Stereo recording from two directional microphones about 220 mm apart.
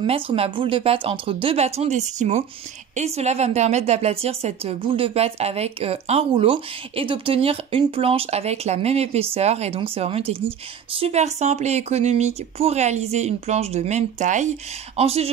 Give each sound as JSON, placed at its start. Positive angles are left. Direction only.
{"t": 0.0, "sound": "a woman's voice", "side_deg": -25}